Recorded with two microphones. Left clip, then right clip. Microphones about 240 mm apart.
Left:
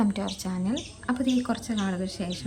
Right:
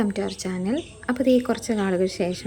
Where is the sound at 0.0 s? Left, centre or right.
Centre.